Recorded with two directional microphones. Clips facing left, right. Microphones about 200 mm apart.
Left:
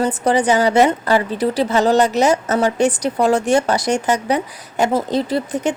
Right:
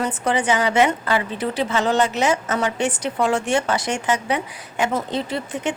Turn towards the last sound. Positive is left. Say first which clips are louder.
# left 6 dB
turn(degrees=40)  # may be behind; listen again after turning